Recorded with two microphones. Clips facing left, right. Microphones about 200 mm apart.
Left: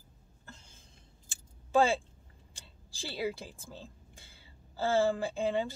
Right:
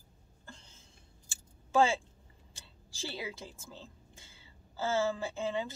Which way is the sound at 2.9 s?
15° left (ahead or behind).